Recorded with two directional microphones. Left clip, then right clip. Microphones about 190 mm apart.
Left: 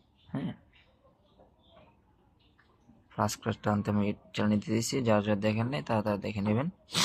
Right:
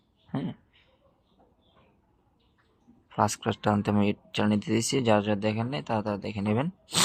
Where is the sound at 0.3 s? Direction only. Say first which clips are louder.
Right 3 dB; 20° right (ahead or behind).